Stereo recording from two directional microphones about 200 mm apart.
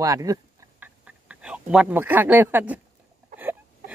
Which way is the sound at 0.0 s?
15° right (ahead or behind).